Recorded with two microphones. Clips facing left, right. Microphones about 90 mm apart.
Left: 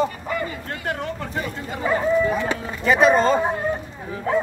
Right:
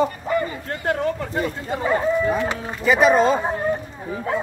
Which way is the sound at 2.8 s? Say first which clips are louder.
Right 1 dB; centre (ahead or behind).